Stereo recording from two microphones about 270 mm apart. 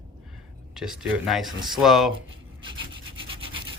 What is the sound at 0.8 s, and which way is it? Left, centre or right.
Speech, centre.